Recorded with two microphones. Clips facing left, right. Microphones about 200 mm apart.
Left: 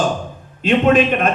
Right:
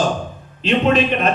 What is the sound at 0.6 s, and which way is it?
Speech, 50° left (ahead or behind).